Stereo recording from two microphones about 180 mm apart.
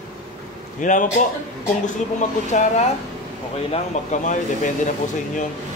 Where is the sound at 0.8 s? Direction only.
45° left (ahead or behind).